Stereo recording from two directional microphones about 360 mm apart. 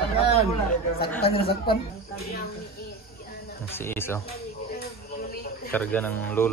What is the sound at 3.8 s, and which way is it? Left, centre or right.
Speech, centre.